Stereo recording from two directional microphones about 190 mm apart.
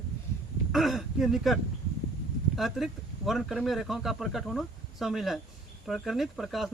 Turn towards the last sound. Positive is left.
turn(degrees=0)  # may be behind; listen again after turning